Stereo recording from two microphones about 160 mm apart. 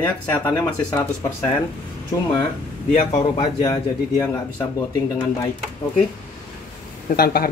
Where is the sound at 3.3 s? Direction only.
25° left (ahead or behind).